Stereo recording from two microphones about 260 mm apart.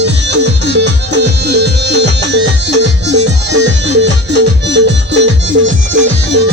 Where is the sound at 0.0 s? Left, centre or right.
Right.